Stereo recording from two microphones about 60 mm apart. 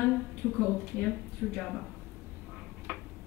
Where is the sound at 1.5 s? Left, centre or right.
Centre.